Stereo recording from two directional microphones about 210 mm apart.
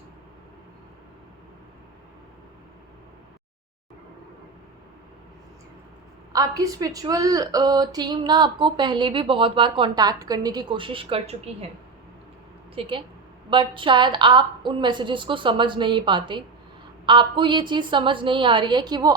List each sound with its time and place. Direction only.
6.3 s a woman's voice: 15° right (ahead or behind)
12.8 s a woman's voice: 25° right (ahead or behind)